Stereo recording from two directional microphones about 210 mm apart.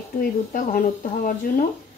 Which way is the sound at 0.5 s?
40° left (ahead or behind).